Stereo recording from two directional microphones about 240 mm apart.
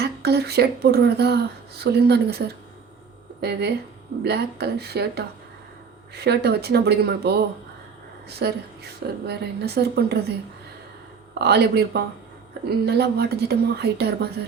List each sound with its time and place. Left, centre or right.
0.0 s speech: right
11.3 s speech: right